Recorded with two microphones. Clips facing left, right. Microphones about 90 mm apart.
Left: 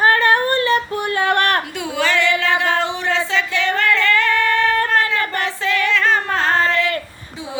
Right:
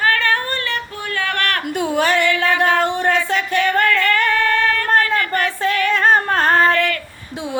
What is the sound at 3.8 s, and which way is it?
Female singing, 50° right (ahead or behind).